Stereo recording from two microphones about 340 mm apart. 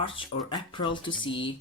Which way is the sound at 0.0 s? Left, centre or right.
Centre.